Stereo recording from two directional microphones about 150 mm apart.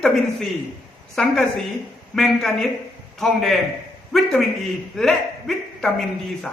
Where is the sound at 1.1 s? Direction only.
Centre (ahead or behind).